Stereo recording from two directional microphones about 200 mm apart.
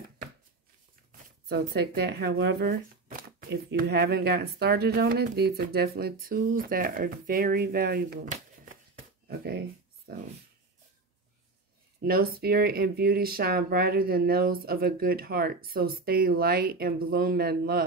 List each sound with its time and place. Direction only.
1.5 s speech: 50° right (ahead or behind)
9.3 s a sound: 50° right (ahead or behind)
12.0 s speech: 50° right (ahead or behind)